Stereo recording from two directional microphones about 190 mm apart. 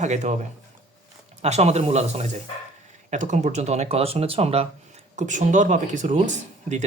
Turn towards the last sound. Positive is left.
turn(degrees=-40)  # may be behind; listen again after turning